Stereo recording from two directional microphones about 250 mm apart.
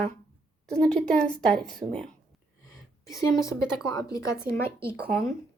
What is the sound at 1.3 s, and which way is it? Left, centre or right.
Speech, centre.